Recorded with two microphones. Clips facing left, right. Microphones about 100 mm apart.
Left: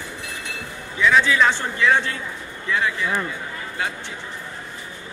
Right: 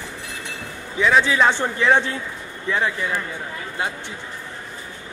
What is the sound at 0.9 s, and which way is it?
A man's voice, 35° right (ahead or behind).